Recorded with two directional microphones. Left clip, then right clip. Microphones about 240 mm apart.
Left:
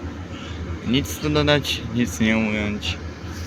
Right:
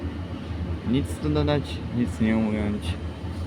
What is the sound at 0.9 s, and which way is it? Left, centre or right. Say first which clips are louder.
Speech: left 5 dB; centre.